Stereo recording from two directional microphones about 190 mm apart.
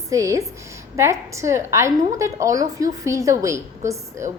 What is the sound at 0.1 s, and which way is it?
A woman's voice, 15° right (ahead or behind).